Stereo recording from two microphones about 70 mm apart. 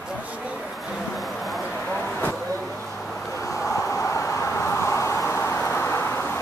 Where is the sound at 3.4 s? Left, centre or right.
Left.